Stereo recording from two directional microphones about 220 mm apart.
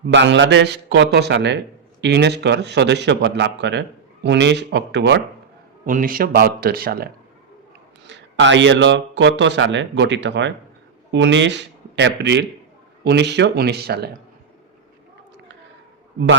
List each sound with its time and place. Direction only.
0.0 s a man's voice: 55° right (ahead or behind)
5.8 s a man's voice: 40° right (ahead or behind)
8.0 s a man's voice: 55° right (ahead or behind)